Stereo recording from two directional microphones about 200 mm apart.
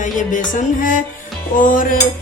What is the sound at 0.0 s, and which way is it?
A woman's voice, 40° left (ahead or behind).